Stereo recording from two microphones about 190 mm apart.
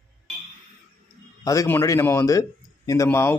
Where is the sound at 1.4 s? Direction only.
15° left (ahead or behind).